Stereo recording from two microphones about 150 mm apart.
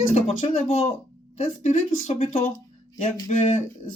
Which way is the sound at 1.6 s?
55° left (ahead or behind).